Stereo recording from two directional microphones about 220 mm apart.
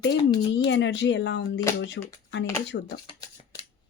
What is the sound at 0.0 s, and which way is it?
Speech, 50° left (ahead or behind).